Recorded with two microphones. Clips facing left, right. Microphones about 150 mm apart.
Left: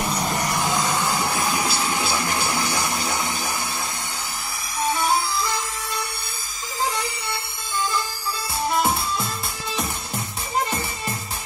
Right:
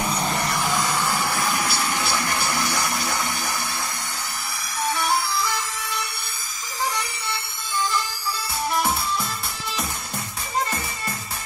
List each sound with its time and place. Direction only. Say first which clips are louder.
0.0 s music: even; centre (ahead or behind)
0.4 s a sound: left 1 dB; 15° left (ahead or behind)
4.9 s music: left 1 dB; 20° left (ahead or behind)
8.7 s music: left 1 dB; 20° left (ahead or behind)